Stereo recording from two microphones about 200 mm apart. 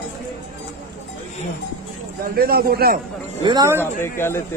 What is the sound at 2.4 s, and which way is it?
Speech, 45° right (ahead or behind).